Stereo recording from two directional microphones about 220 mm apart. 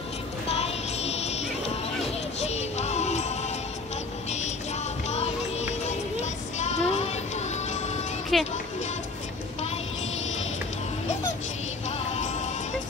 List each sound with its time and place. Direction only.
0.5 s music: 30° left (ahead or behind)
5.0 s music: 30° left (ahead or behind)
8.3 s music: centre (ahead or behind)
12.1 s music: 30° left (ahead or behind)